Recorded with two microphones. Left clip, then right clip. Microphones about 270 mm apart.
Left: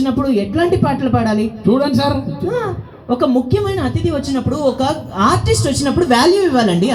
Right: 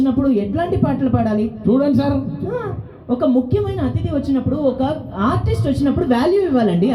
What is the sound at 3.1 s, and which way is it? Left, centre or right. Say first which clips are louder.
Speech: left 2 dB; left.